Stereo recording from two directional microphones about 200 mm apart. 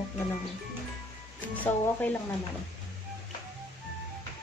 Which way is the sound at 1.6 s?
10° left (ahead or behind).